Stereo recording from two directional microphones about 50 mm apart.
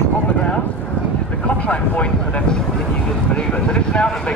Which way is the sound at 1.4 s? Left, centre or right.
Left.